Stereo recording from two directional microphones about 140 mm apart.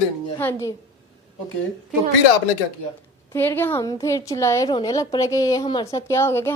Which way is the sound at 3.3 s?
15° left (ahead or behind).